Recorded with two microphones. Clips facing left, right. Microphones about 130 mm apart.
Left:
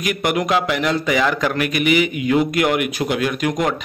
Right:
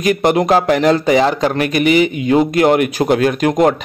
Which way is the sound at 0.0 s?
35° right (ahead or behind).